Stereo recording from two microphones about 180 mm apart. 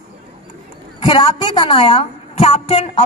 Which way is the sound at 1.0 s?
30° left (ahead or behind).